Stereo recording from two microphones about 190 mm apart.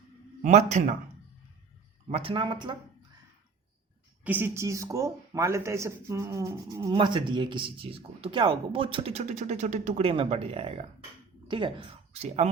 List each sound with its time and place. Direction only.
0.4 s speech: 35° right (ahead or behind)
2.0 s speech: 30° right (ahead or behind)
4.2 s speech: 10° right (ahead or behind); by 12.5 s 35° right (ahead or behind)